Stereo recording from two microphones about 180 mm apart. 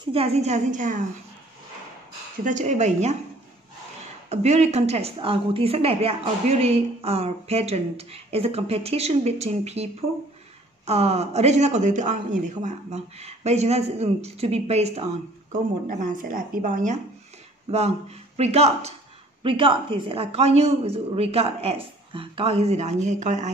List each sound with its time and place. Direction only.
0.0 s a woman's voice: 30° right (ahead or behind)
2.4 s a woman's voice: 40° right (ahead or behind)
4.3 s a woman's voice: 40° right (ahead or behind)
10.9 s a woman's voice: 35° right (ahead or behind)
15.9 s a woman's voice: 50° right (ahead or behind)